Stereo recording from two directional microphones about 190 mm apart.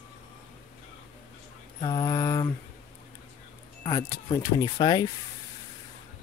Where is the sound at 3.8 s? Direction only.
20° left (ahead or behind).